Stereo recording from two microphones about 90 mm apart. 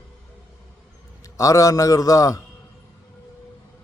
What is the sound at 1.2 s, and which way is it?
A man's voice, 40° left (ahead or behind).